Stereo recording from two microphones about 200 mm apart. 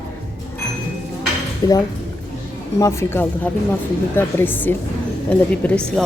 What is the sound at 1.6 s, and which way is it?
A woman's voice, 20° left (ahead or behind).